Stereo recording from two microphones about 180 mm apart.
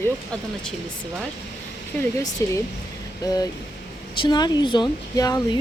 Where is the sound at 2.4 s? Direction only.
15° left (ahead or behind).